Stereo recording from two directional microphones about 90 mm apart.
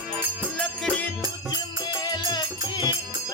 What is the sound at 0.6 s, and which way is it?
Music, 10° left (ahead or behind).